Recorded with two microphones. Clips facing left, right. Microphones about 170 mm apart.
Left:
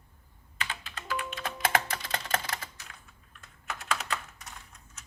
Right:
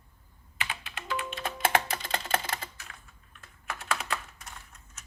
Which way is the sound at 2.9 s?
5° right (ahead or behind).